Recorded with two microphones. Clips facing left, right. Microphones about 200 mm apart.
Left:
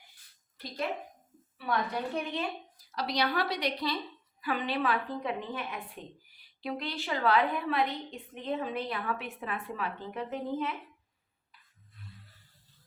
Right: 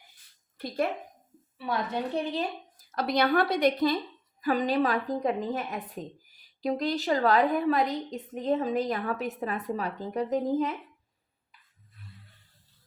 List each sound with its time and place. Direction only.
1.5 s a woman's voice: 25° right (ahead or behind)
2.7 s a woman's voice: 50° right (ahead or behind)